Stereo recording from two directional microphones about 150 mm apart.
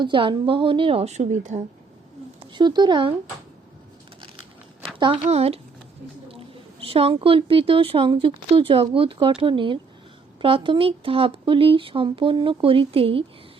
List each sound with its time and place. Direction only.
0.0 s a woman's voice: 35° right (ahead or behind); by 1.6 s 55° right (ahead or behind)
2.5 s speech: 30° right (ahead or behind)
4.9 s a woman's voice: 35° right (ahead or behind)